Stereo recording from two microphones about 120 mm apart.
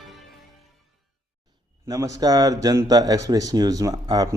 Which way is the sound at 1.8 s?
25° right (ahead or behind).